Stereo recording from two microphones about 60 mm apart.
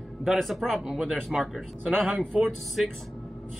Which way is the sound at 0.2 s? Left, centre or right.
Centre.